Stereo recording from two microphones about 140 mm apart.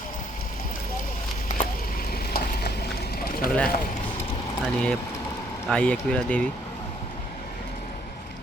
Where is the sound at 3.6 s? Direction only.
90° left.